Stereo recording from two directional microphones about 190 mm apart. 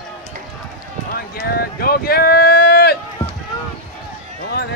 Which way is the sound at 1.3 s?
55° left (ahead or behind).